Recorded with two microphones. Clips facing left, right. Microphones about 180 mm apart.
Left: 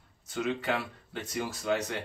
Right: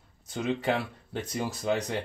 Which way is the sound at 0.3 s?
35° right (ahead or behind).